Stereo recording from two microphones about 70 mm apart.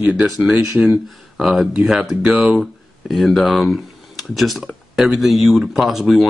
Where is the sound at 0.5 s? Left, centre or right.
Centre.